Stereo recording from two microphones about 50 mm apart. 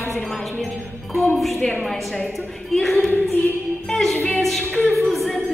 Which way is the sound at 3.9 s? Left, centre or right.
Centre.